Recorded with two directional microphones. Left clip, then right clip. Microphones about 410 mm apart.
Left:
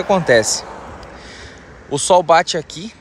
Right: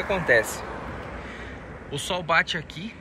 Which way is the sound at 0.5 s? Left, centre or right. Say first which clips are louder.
Left 8 dB; left.